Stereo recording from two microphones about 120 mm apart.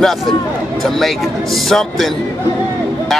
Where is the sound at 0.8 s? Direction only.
Centre (ahead or behind).